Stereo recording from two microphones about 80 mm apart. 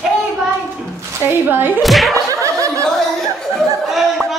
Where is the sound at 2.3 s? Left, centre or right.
Right.